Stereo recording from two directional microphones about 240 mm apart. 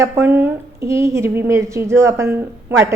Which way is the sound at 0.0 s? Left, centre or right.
Centre.